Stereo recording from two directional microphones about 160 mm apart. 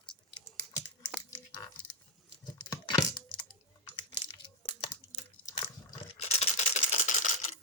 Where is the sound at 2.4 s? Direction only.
25° left (ahead or behind).